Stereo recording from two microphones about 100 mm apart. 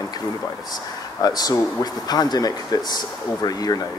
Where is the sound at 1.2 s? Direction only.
40° left (ahead or behind).